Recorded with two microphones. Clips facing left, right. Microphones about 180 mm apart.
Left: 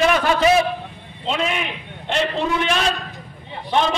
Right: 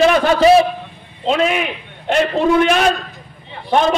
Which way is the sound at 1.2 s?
45° right (ahead or behind).